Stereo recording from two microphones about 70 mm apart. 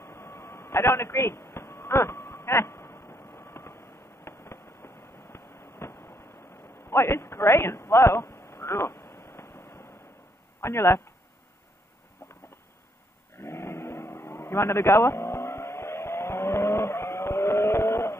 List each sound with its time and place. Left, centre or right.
0.0 s vehicle: left
1.5 s a sound: left
10.6 s speech: left
13.4 s vehicle: left